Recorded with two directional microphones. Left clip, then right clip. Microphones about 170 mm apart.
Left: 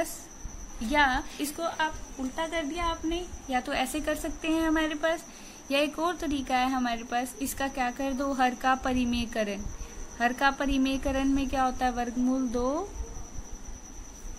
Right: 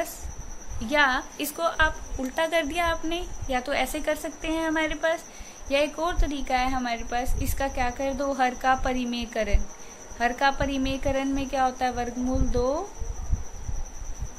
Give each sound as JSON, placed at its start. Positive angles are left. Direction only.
{"t": 0.8, "sound": "a woman's voice", "side_deg": 15}
{"t": 2.3, "sound": "speech", "side_deg": -15}
{"t": 3.4, "sound": "a woman's voice", "side_deg": 20}